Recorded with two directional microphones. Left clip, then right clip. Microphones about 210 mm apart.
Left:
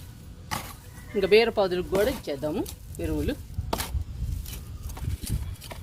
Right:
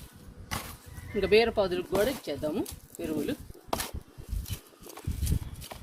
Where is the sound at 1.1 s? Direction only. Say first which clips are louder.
Left 3 dB; 35° left (ahead or behind).